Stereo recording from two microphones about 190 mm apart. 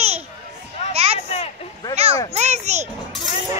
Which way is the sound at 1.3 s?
30° left (ahead or behind).